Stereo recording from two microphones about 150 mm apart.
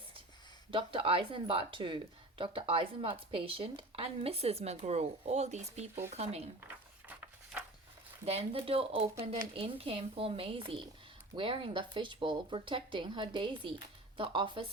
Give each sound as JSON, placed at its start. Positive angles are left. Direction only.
{"t": 0.7, "sound": "speech", "side_deg": -35}
{"t": 7.1, "sound": "a sound", "side_deg": -10}
{"t": 8.2, "sound": "speech", "side_deg": -45}
{"t": 9.0, "sound": "speech", "side_deg": -20}
{"t": 9.6, "sound": "speech", "side_deg": -40}